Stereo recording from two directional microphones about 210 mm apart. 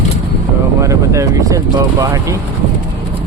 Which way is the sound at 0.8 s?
15° right (ahead or behind).